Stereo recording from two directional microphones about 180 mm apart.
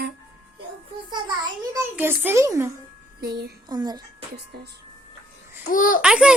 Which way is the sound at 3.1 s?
60° right (ahead or behind).